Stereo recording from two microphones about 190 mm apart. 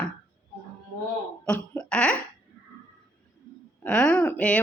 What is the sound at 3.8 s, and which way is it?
Speech, 5° left (ahead or behind).